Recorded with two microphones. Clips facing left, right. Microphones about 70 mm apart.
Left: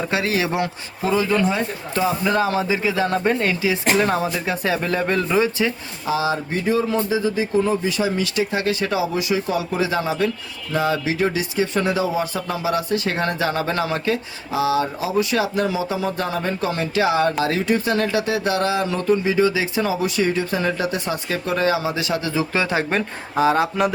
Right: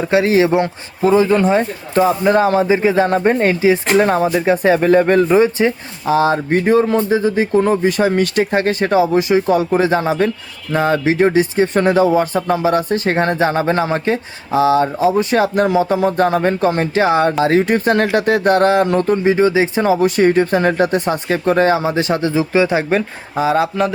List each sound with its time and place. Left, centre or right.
0.1 s speech: right
22.5 s speech: centre
22.9 s speech: centre